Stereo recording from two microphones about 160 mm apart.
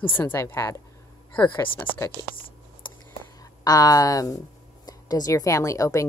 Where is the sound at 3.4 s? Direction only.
25° left (ahead or behind).